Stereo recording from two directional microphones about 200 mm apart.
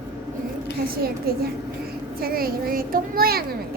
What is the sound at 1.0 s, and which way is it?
A child's voice, 50° right (ahead or behind).